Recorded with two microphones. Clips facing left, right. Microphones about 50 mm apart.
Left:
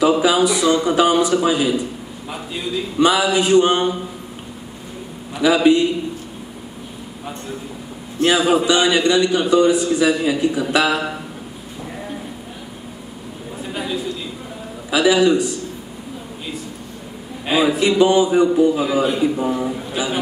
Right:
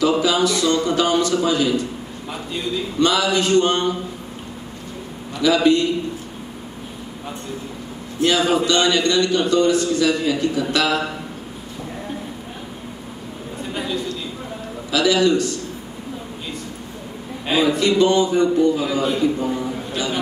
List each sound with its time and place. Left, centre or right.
0.0 s a man's voice: centre
3.0 s a man's voice: centre
5.3 s a man's voice: centre
8.2 s a man's voice: centre
13.6 s a sound: centre
14.9 s a man's voice: centre
17.5 s a man's voice: centre